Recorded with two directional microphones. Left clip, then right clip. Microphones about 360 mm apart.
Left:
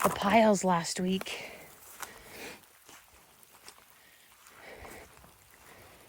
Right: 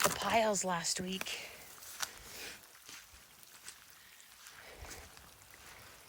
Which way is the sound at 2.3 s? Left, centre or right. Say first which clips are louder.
Left 3 dB; centre.